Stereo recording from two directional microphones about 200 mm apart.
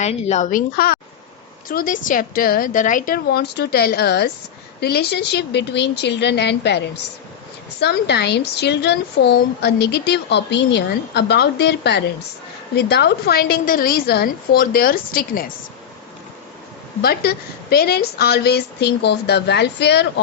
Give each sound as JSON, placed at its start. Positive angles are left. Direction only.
{"t": 0.0, "sound": "speech", "side_deg": 35}
{"t": 0.8, "sound": "a woman's voice", "side_deg": 50}
{"t": 17.0, "sound": "speech", "side_deg": 50}